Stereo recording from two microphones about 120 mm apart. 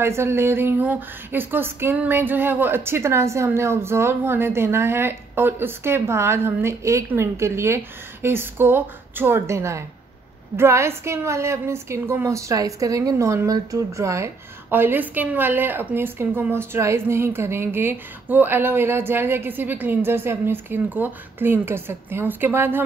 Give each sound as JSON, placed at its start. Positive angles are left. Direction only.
{"t": 0.0, "sound": "a woman's voice", "side_deg": -20}